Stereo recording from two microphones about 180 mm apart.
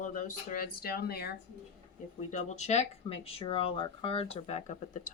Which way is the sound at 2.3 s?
40° left (ahead or behind).